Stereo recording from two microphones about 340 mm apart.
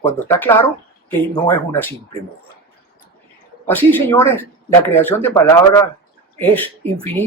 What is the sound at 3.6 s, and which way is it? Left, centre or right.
Speech, centre.